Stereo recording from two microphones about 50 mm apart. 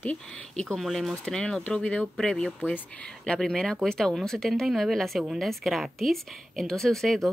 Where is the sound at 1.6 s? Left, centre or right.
Left.